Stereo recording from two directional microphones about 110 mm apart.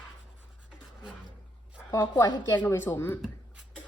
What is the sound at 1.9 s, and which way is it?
Speech, 30° left (ahead or behind).